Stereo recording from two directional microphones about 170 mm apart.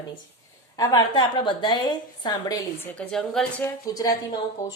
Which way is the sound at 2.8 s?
10° left (ahead or behind).